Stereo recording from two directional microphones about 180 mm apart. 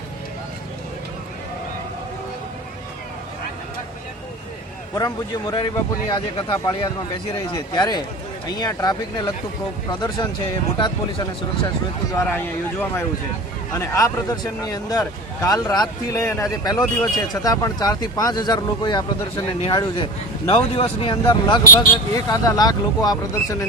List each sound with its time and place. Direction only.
4.9 s speech: 20° left (ahead or behind)
10.8 s speech: 25° left (ahead or behind)
12.1 s a man's voice: 10° left (ahead or behind)
20.5 s speech: 30° left (ahead or behind)